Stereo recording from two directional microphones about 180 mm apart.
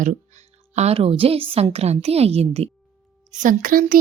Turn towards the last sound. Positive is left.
turn(degrees=-50)  # may be behind; listen again after turning